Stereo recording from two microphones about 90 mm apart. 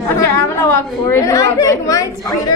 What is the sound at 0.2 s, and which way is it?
Chatter, 30° left (ahead or behind).